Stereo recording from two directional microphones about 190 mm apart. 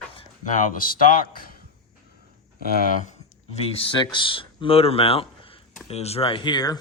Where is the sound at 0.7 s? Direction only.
50° left (ahead or behind).